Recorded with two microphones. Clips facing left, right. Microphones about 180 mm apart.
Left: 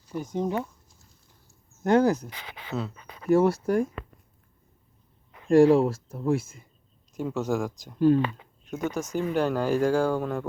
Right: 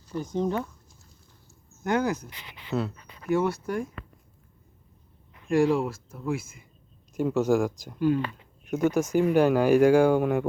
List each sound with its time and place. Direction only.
0.1 s speech: 10° left (ahead or behind)
1.8 s speech: 35° left (ahead or behind)
3.2 s speech: 35° left (ahead or behind)
5.7 s speech: 35° left (ahead or behind)
7.1 s speech: 5° right (ahead or behind)
7.9 s speech: 35° left (ahead or behind)
8.6 s speech: 10° right (ahead or behind)